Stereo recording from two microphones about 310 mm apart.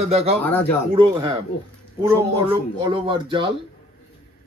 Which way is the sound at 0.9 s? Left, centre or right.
Centre.